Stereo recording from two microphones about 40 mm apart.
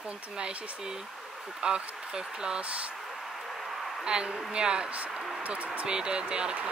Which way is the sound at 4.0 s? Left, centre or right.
Right.